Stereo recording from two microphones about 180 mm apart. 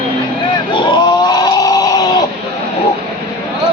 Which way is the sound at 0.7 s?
25° left (ahead or behind).